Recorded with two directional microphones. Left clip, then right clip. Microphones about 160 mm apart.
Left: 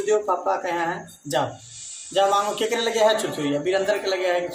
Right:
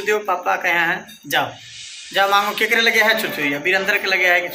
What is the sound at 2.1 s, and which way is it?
A man's voice, 20° left (ahead or behind).